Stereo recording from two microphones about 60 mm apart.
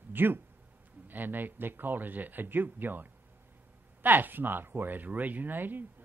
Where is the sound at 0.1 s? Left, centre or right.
Right.